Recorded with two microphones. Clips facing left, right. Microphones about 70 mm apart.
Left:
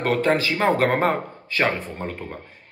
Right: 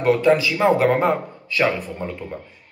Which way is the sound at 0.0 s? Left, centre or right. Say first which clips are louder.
Right 4 dB; left.